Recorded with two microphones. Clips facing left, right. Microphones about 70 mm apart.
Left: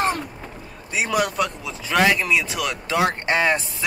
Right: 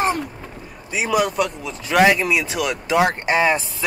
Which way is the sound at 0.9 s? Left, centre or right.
Centre.